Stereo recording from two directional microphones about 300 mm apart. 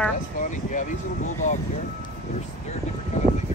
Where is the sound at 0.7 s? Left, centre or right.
Left.